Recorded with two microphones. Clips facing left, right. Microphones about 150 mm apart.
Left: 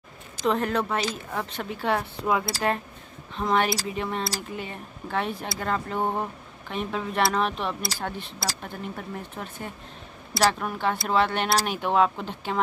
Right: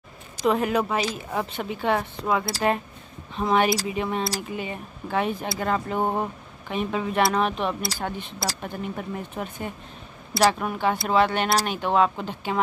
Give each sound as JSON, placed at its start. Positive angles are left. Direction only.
{"t": 0.4, "sound": "speech", "side_deg": -10}
{"t": 3.3, "sound": "speech", "side_deg": -10}